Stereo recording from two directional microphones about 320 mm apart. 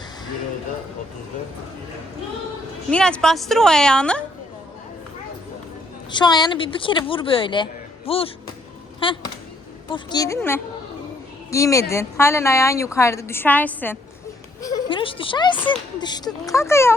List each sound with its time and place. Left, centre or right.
2.9 s a woman's voice: centre
6.1 s speech: centre